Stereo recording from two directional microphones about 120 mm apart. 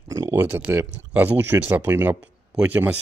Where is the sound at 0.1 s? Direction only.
30° right (ahead or behind).